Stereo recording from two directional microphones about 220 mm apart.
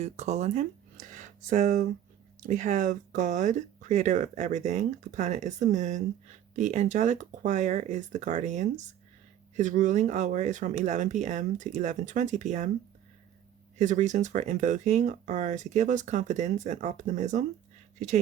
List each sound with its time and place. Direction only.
0.0 s speech: 30° right (ahead or behind)
13.7 s speech: 35° right (ahead or behind)